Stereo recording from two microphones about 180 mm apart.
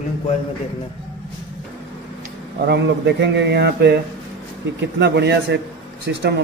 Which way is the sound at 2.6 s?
70° right (ahead or behind).